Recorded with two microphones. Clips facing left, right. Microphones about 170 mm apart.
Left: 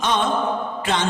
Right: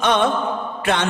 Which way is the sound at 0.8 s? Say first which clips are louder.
Right 3 dB; 60° right (ahead or behind).